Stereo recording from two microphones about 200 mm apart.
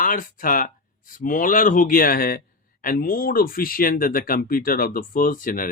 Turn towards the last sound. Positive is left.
turn(degrees=45)  # may be behind; listen again after turning